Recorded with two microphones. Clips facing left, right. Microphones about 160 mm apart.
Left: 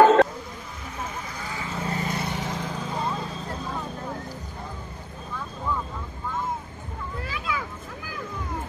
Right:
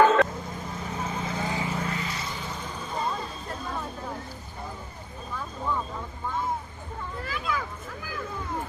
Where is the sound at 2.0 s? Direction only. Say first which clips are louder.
Left 5 dB; 60° left (ahead or behind); by 2.7 s 85° left.